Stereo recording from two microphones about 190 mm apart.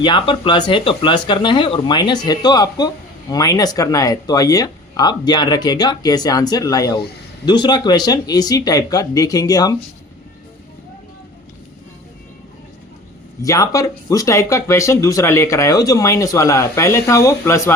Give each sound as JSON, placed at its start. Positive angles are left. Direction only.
{"t": 0.0, "sound": "speech", "side_deg": 25}
{"t": 13.4, "sound": "speech", "side_deg": 15}